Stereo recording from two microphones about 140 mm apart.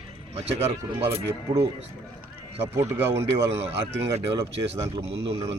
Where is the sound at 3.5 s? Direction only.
45° right (ahead or behind).